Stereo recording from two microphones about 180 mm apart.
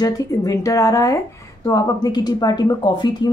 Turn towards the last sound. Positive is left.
turn(degrees=25)  # may be behind; listen again after turning